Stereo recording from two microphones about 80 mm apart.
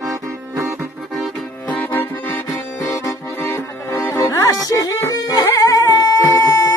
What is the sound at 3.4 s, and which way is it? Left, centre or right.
Music, left.